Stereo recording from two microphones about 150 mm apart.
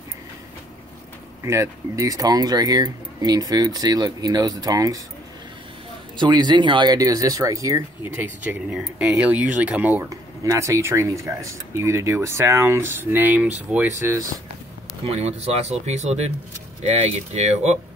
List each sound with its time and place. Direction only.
1.4 s speech: 20° right (ahead or behind)
6.1 s speech: 30° right (ahead or behind); by 10.0 s 10° right (ahead or behind)
10.0 s speech: 20° right (ahead or behind); by 13.8 s 5° right (ahead or behind)
15.0 s speech: 45° right (ahead or behind)